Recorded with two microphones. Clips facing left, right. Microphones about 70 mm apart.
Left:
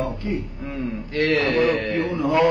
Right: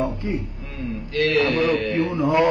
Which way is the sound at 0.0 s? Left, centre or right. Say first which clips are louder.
Right 1 dB; right.